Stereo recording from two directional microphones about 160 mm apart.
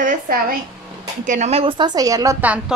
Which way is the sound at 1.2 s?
50° right (ahead or behind).